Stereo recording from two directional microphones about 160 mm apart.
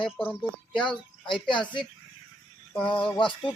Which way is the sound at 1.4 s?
30° left (ahead or behind).